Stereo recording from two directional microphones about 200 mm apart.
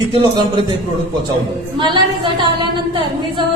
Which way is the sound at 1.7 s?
25° right (ahead or behind).